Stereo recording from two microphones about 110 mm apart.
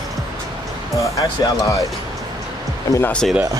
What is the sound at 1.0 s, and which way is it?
Speech, 30° left (ahead or behind).